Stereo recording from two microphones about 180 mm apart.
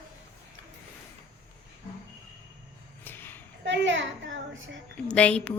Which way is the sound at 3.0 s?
10° left (ahead or behind).